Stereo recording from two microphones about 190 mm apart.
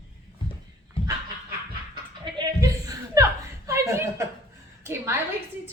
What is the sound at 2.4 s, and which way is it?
Chuckle, 20° right (ahead or behind).